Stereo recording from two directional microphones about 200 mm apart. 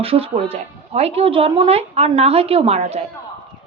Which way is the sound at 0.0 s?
30° right (ahead or behind).